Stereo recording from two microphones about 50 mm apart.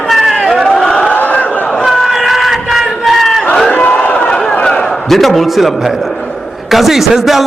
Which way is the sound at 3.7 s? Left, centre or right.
Left.